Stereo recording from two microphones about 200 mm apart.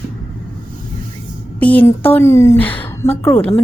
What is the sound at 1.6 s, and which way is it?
A woman's voice, 10° left (ahead or behind).